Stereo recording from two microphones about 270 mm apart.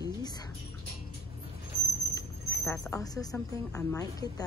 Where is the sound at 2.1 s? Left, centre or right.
Centre.